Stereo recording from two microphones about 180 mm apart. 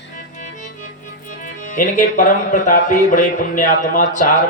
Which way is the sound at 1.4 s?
45° left (ahead or behind).